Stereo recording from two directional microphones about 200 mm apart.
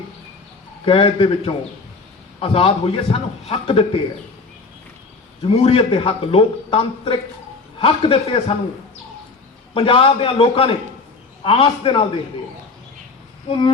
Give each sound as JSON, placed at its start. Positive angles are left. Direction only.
{"t": 0.9, "sound": "a man's voice", "side_deg": 25}
{"t": 5.5, "sound": "a man's voice", "side_deg": 30}
{"t": 9.7, "sound": "a man's voice", "side_deg": 25}
{"t": 13.5, "sound": "a man's voice", "side_deg": 25}